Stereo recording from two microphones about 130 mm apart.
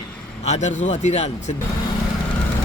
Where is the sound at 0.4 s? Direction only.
60° left (ahead or behind).